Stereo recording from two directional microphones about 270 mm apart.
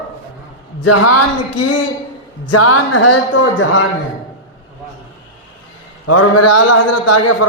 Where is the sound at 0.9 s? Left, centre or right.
Left.